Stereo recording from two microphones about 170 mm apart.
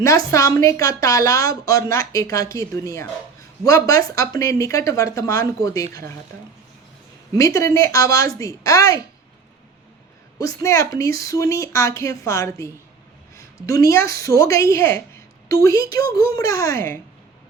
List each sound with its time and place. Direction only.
0.3 s a woman's voice: 20° left (ahead or behind)
7.3 s a woman's voice: 20° left (ahead or behind)
10.4 s speech: 20° left (ahead or behind)
13.8 s a woman's voice: 15° left (ahead or behind)
16.0 s speech: 65° right (ahead or behind)
16.3 s speech: 20° left (ahead or behind)